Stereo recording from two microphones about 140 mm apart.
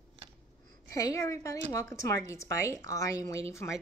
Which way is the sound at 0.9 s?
25° left (ahead or behind).